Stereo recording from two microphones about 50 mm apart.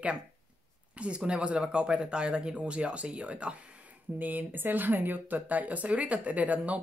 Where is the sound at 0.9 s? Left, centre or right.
Right.